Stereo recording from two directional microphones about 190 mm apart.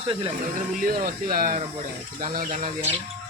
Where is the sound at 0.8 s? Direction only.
50° right (ahead or behind).